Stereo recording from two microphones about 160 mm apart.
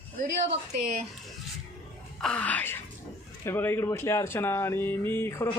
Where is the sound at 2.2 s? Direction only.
5° left (ahead or behind).